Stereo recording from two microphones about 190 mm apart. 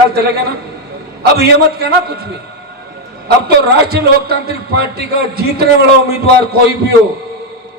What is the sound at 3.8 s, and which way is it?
A man's voice, 55° right (ahead or behind).